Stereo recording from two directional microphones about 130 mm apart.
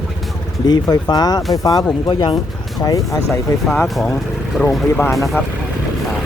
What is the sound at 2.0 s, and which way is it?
Speech, 40° left (ahead or behind).